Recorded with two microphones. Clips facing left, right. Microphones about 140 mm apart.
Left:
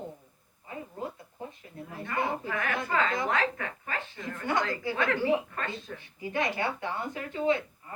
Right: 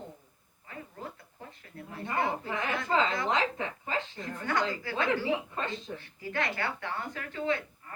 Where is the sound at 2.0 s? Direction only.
25° right (ahead or behind).